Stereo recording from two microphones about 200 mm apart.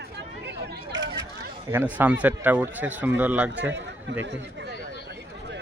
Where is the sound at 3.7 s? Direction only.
60° right (ahead or behind).